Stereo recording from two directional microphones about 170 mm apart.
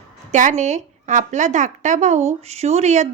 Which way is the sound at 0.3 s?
45° right (ahead or behind).